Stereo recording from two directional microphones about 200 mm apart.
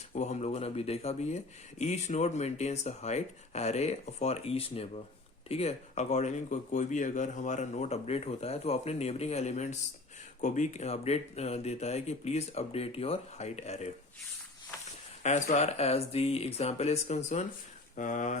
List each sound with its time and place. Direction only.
0.1 s speech: 35° left (ahead or behind)
15.2 s speech: 35° left (ahead or behind)